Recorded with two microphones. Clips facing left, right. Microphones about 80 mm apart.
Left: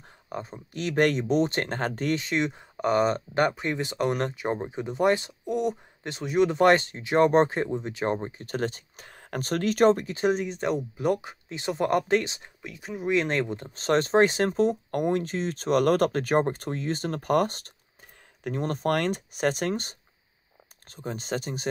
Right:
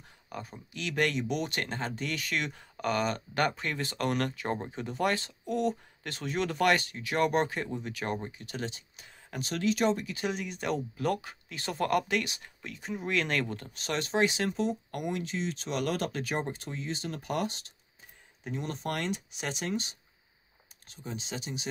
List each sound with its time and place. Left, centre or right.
0.3 s speech: left
1.8 s speech: left
2.1 s speech: left
6.6 s speech: left
10.1 s speech: left
12.6 s speech: centre
13.1 s speech: left
13.7 s speech: left